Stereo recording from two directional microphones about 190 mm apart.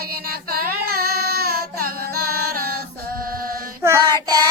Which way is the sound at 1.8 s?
55° right (ahead or behind).